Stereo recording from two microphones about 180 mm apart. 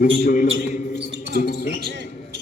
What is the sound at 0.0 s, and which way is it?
A man's voice, 50° left (ahead or behind).